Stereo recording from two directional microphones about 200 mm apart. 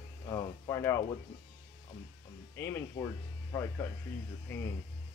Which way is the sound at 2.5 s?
15° left (ahead or behind).